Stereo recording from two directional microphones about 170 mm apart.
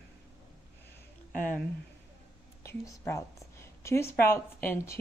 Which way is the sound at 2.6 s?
15° left (ahead or behind).